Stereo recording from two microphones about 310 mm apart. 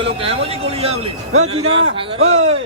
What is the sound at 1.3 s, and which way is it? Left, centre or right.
Speech, right.